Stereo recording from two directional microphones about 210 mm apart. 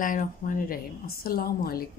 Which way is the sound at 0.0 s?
40° left (ahead or behind).